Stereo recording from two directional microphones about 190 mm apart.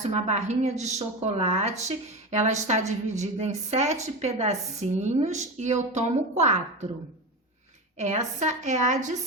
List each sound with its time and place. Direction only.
0.0 s a woman's voice: 35° right (ahead or behind)
7.9 s a woman's voice: 35° right (ahead or behind)